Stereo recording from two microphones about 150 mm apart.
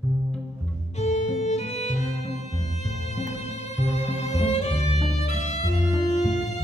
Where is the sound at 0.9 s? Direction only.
50° left (ahead or behind).